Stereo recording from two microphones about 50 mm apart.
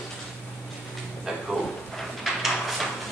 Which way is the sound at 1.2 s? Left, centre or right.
Centre.